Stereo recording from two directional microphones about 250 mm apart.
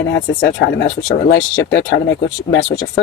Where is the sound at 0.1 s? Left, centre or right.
Left.